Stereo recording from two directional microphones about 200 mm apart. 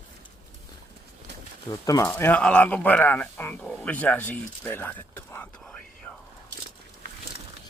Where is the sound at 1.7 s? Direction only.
15° left (ahead or behind).